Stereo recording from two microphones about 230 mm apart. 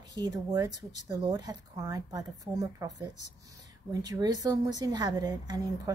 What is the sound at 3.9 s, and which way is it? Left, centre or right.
A woman's voice, centre.